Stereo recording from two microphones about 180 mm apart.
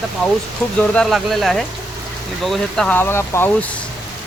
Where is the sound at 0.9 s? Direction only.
Centre (ahead or behind).